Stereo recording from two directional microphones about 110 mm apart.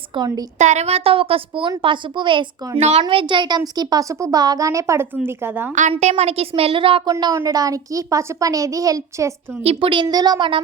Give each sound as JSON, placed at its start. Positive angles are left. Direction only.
{"t": 0.1, "sound": "a woman's voice", "side_deg": -50}
{"t": 0.6, "sound": "a woman's voice", "side_deg": -90}
{"t": 2.7, "sound": "a child's voice", "side_deg": -90}
{"t": 3.0, "sound": "a child's voice", "side_deg": -50}
{"t": 6.0, "sound": "a woman's voice", "side_deg": -80}
{"t": 7.1, "sound": "a child's voice", "side_deg": -35}
{"t": 9.6, "sound": "a woman's voice", "side_deg": -50}